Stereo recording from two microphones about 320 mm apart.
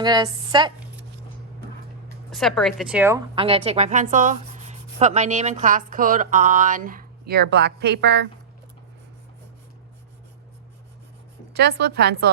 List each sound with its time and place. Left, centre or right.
0.0 s a woman's voice: centre
2.3 s a woman's voice: centre; by 8.3 s right
11.5 s a woman's voice: right